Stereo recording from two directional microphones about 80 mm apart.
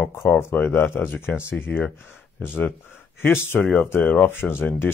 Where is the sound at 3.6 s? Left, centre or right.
Centre.